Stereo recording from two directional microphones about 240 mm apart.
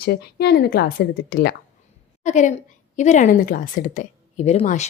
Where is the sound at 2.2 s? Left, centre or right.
Left.